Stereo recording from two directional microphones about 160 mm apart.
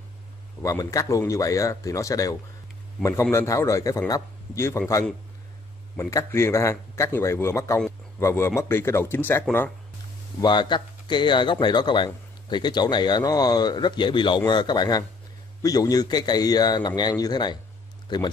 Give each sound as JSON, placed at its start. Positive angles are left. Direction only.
{"t": 0.6, "sound": "speech", "side_deg": 20}
{"t": 10.4, "sound": "speech", "side_deg": 30}